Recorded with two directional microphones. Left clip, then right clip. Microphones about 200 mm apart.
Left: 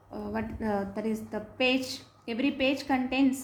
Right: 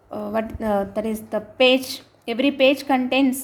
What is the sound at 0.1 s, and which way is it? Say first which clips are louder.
A woman's voice: right 10 dB; 45° right (ahead or behind).